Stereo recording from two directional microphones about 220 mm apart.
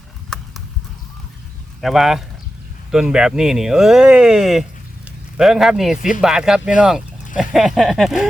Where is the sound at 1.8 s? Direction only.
Centre (ahead or behind).